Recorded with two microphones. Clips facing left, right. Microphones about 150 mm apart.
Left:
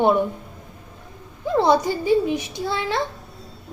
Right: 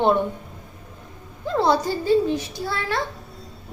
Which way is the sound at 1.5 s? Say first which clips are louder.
Left 2 dB; 20° left (ahead or behind).